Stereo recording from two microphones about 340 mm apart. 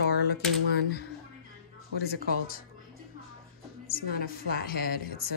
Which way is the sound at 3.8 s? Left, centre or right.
Left.